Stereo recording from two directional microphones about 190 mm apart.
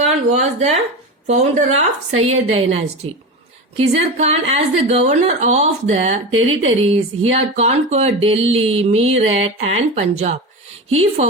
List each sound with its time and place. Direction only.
0.3 s a woman's voice: 35° right (ahead or behind)